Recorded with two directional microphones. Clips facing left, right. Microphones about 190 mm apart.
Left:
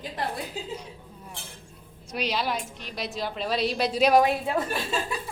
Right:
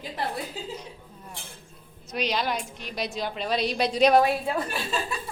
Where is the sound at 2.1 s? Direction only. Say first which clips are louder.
Right 1 dB; 5° left (ahead or behind).